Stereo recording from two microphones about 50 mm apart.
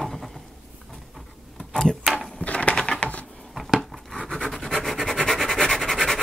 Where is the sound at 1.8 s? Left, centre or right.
Centre.